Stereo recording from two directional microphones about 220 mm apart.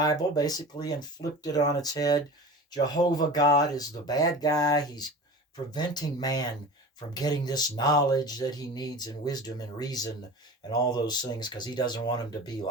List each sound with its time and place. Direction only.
0.0 s speech: 15° left (ahead or behind)